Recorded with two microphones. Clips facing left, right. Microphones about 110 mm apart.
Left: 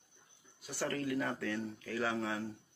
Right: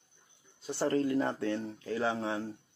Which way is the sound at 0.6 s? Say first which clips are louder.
Right 8 dB; 25° right (ahead or behind).